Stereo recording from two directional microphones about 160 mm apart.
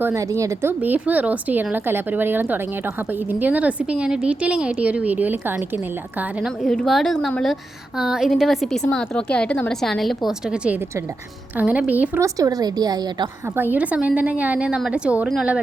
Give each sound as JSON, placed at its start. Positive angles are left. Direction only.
{"t": 0.0, "sound": "a woman's voice", "side_deg": -20}
{"t": 12.1, "sound": "a woman's voice", "side_deg": -20}
{"t": 13.6, "sound": "a woman's voice", "side_deg": -10}